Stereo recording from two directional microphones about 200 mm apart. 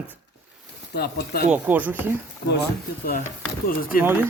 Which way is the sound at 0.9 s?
55° left (ahead or behind).